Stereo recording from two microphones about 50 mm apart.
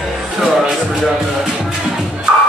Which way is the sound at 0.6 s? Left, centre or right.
Centre.